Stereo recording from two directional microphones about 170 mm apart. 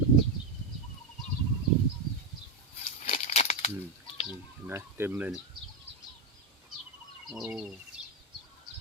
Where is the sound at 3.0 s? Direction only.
45° left (ahead or behind).